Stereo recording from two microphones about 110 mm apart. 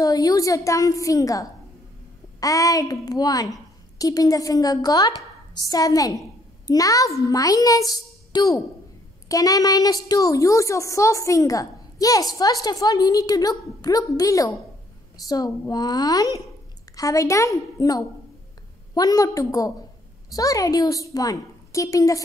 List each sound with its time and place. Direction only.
0.0 s a woman's voice: 35° left (ahead or behind)